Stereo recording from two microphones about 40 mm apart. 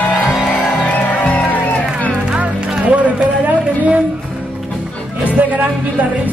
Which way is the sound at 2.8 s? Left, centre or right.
Right.